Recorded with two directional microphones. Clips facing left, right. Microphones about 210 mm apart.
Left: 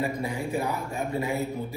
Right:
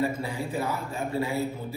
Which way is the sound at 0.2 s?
15° left (ahead or behind).